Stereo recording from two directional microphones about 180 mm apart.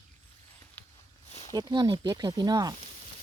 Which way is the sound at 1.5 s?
25° right (ahead or behind).